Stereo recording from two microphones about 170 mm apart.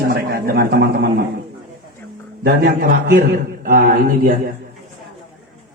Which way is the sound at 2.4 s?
60° right (ahead or behind).